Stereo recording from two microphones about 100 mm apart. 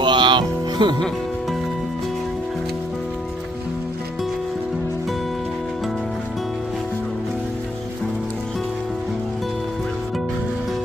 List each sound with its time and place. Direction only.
0.0 s music: 50° right (ahead or behind)